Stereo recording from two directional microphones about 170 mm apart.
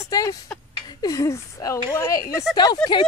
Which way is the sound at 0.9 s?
20° left (ahead or behind).